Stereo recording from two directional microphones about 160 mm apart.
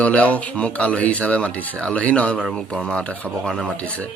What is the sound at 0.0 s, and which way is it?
Speech, 10° left (ahead or behind).